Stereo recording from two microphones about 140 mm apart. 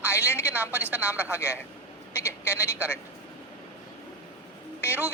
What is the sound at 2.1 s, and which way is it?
Vehicle, 15° left (ahead or behind).